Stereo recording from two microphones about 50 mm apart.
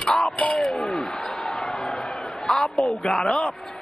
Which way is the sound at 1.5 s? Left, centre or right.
Centre.